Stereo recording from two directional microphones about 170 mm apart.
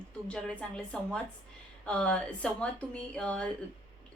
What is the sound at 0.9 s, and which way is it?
A woman's voice, 5° left (ahead or behind).